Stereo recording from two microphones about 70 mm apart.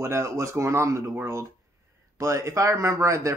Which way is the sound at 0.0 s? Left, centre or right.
Right.